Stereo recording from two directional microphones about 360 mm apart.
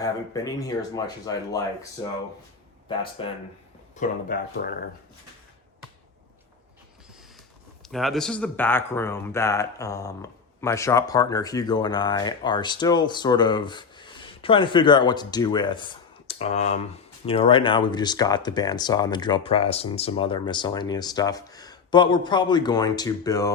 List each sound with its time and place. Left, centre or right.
0.0 s speech: centre
3.2 s speech: centre
4.3 s speech: left
7.8 s speech: centre